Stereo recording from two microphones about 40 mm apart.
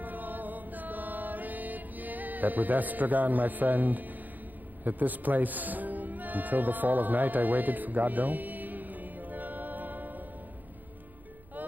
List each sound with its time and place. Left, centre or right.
0.0 s chant: right
4.8 s music: right